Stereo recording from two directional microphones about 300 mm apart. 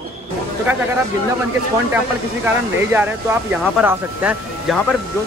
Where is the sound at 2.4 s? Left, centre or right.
Centre.